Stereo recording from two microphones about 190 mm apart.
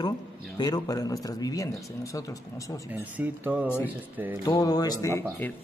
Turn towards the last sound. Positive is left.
turn(degrees=15)  # may be behind; listen again after turning